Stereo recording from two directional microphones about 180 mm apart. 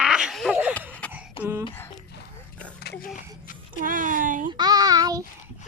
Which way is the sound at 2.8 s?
60° left (ahead or behind).